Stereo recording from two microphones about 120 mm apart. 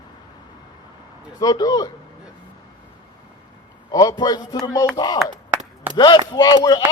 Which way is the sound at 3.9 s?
35° left (ahead or behind).